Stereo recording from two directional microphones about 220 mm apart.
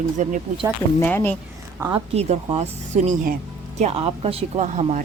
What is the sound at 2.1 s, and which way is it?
Speech, 30° right (ahead or behind).